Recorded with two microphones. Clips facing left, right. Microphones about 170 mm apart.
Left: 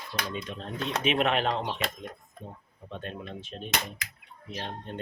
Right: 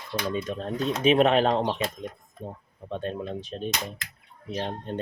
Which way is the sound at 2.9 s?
35° right (ahead or behind).